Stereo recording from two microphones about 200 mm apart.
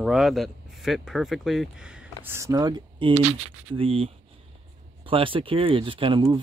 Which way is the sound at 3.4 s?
30° right (ahead or behind).